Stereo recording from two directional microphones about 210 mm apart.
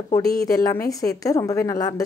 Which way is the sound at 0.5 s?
15° left (ahead or behind).